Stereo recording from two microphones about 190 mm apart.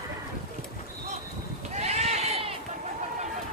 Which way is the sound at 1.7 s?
35° right (ahead or behind).